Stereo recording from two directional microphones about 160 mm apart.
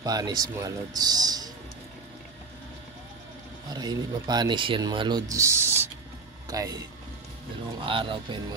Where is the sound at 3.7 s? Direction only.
25° right (ahead or behind).